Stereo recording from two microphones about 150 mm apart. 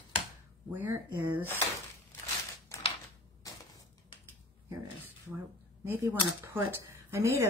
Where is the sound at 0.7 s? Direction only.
15° right (ahead or behind).